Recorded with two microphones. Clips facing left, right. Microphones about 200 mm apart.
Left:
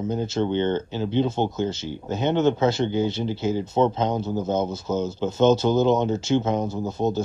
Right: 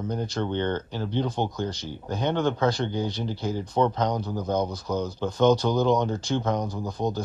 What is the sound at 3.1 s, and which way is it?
Speech, 25° left (ahead or behind).